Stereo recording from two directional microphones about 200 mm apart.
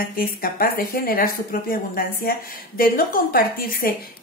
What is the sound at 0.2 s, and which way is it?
A woman's voice, 45° left (ahead or behind).